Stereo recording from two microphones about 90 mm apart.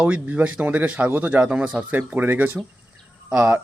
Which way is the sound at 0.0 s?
15° right (ahead or behind).